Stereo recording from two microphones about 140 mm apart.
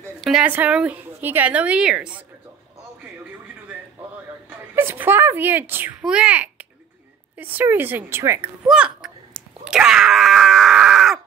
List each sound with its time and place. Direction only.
0.2 s a woman's voice: 5° right (ahead or behind)
4.5 s a sound: 15° right (ahead or behind)
7.3 s a woman's voice: 15° right (ahead or behind)
8.6 s a child's voice: 5° right (ahead or behind)
9.3 s groan: 5° right (ahead or behind)